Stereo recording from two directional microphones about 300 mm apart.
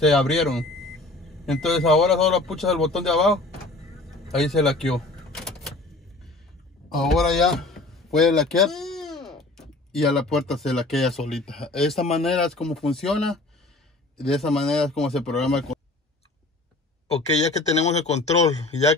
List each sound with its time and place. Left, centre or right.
0.0 s speech: centre
4.1 s vehicle: centre
6.9 s speech: centre
17.7 s speech: left